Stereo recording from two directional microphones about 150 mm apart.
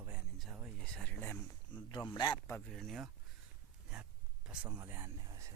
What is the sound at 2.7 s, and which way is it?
Speech, centre (ahead or behind).